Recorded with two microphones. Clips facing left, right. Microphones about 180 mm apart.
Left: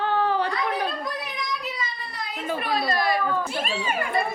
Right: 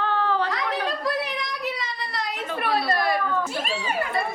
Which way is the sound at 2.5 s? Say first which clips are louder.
Right 2 dB; 65° right (ahead or behind).